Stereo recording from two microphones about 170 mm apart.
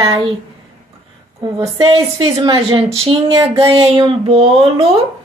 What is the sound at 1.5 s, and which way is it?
A woman's voice, 30° right (ahead or behind).